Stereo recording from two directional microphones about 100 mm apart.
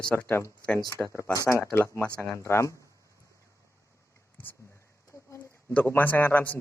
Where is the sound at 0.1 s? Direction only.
10° left (ahead or behind).